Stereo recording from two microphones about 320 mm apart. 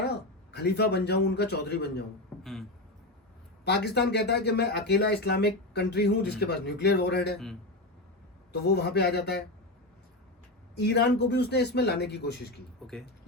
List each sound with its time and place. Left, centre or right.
0.0 s a man's voice: left
2.4 s beatboxing: centre
3.6 s speech: left
8.5 s speech: left
10.8 s speech: left